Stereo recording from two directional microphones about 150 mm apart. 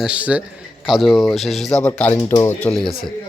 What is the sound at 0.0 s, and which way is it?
Speech, 10° right (ahead or behind).